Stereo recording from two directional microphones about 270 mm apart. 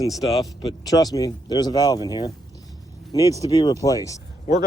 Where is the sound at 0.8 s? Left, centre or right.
Centre.